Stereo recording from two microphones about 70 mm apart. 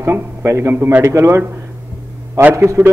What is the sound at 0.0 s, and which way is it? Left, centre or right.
A man's voice, right.